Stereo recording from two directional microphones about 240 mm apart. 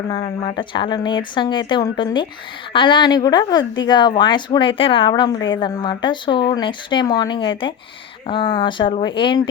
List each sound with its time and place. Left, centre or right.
0.2 s speech: left